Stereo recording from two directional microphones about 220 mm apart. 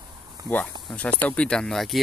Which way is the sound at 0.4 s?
15° right (ahead or behind).